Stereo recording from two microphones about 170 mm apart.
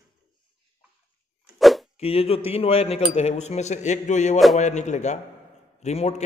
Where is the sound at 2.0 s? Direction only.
35° left (ahead or behind).